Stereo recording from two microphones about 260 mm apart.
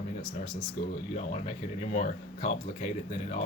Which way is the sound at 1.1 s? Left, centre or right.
Left.